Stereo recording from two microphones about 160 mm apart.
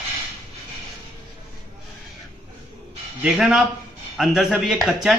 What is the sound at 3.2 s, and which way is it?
Speech, 5° right (ahead or behind).